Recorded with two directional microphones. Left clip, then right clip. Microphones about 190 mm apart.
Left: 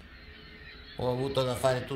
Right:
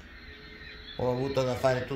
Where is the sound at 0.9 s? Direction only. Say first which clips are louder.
Right 1 dB; centre (ahead or behind).